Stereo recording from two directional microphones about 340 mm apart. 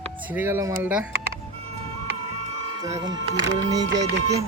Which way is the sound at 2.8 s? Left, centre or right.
Centre.